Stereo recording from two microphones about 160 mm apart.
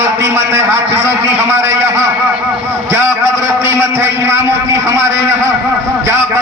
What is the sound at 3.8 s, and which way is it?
A man's voice, 15° right (ahead or behind).